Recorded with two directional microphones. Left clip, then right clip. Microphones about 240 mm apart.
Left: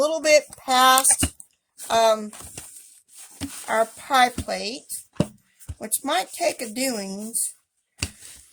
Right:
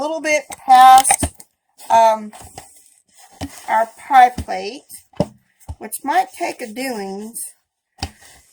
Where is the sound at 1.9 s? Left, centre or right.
Left.